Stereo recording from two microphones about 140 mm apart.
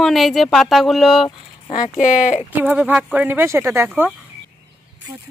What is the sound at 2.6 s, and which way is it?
Speech, 10° right (ahead or behind).